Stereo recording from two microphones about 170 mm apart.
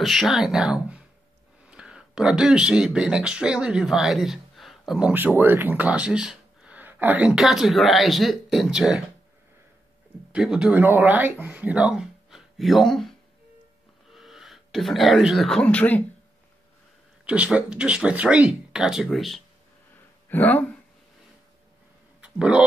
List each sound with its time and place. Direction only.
0.0 s speech: centre (ahead or behind)
10.3 s speech: 5° right (ahead or behind)
14.1 s speech: centre (ahead or behind)
17.3 s speech: 5° right (ahead or behind)
20.2 s speech: 10° left (ahead or behind)
22.2 s speech: 5° right (ahead or behind)